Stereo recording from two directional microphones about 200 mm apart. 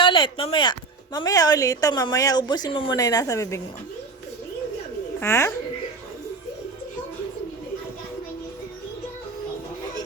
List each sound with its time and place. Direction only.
0.0 s speech: 25° left (ahead or behind)
5.2 s a child's voice: 15° left (ahead or behind)